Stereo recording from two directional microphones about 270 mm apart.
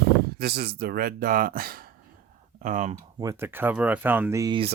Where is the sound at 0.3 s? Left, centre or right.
Right.